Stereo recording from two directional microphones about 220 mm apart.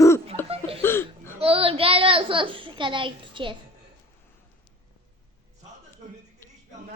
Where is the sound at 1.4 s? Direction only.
25° right (ahead or behind).